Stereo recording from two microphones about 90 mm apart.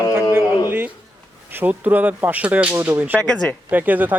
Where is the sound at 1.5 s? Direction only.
20° right (ahead or behind).